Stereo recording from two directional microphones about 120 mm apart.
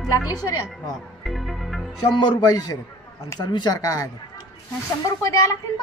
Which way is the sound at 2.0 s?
40° left (ahead or behind).